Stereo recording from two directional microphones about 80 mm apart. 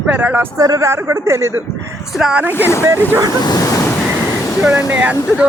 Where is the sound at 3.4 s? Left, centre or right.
Left.